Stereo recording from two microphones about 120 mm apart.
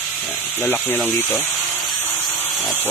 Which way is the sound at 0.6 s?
10° left (ahead or behind).